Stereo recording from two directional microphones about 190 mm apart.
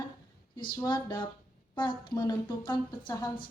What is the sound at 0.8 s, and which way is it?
Speech, 20° left (ahead or behind).